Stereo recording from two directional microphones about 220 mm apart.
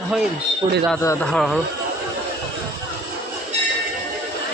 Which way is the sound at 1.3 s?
5° left (ahead or behind).